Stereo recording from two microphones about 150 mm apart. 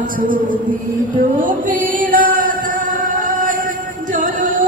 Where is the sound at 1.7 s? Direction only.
65° right (ahead or behind).